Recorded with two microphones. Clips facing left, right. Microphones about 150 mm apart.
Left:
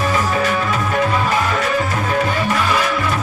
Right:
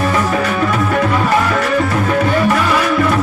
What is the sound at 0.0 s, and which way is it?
Music, 60° right (ahead or behind).